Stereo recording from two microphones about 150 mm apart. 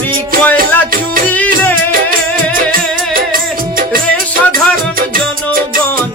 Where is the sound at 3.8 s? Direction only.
70° right (ahead or behind).